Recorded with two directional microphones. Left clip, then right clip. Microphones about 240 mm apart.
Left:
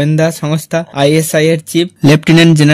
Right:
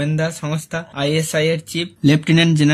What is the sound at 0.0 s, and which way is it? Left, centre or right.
Speech, left.